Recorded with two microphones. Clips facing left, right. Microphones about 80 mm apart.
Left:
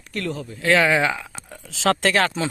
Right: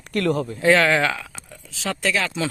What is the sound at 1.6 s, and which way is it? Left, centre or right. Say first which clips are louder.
Speech: left 5 dB; left.